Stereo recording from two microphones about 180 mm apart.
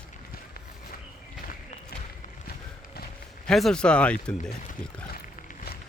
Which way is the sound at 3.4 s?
5° left (ahead or behind).